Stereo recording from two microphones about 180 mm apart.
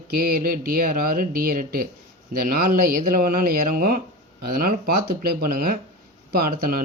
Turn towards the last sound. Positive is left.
turn(degrees=-55)  # may be behind; listen again after turning